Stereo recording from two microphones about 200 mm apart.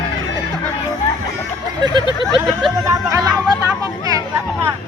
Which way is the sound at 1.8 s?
20° right (ahead or behind).